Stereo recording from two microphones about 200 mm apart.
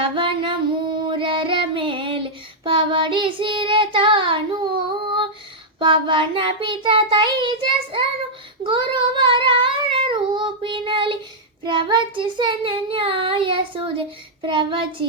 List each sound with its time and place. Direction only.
0.0 s female singing: 25° right (ahead or behind)
1.0 s child singing: 25° right (ahead or behind)